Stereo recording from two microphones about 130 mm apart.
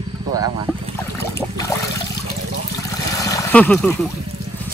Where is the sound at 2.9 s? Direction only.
25° left (ahead or behind).